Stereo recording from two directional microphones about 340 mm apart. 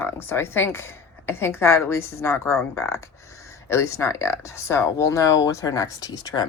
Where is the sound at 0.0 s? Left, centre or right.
Centre.